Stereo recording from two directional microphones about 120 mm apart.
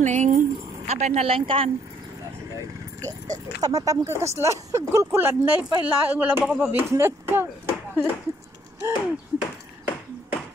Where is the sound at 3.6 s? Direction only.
30° right (ahead or behind).